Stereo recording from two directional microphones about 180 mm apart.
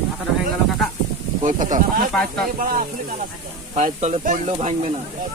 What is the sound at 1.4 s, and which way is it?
Speech, 45° right (ahead or behind).